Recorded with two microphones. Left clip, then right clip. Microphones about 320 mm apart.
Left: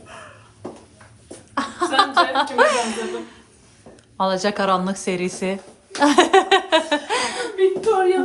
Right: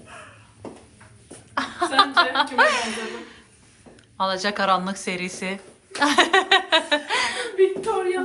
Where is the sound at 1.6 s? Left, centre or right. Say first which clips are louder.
Left 1 dB; centre.